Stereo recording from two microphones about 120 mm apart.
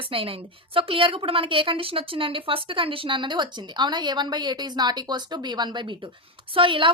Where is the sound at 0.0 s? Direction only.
50° right (ahead or behind).